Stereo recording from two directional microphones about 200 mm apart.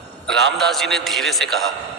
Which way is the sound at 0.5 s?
Centre (ahead or behind).